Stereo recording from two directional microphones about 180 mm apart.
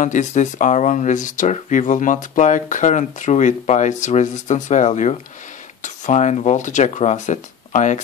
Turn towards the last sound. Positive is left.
turn(degrees=45)  # may be behind; listen again after turning